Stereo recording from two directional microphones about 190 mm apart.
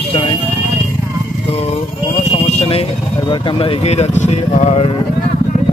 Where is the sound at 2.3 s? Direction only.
30° left (ahead or behind).